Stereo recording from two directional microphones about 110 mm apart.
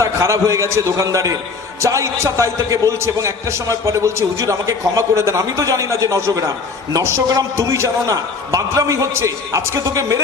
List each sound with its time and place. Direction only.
0.0 s a man's voice: 30° right (ahead or behind)